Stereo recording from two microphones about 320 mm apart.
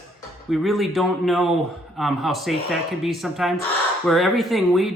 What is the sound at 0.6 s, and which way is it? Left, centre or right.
Speech, centre.